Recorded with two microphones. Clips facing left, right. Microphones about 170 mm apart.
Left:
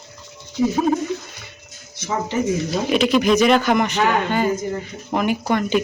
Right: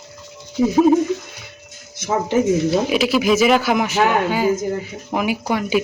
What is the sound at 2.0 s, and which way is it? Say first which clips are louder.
Speech: right 4 dB; 50° right (ahead or behind).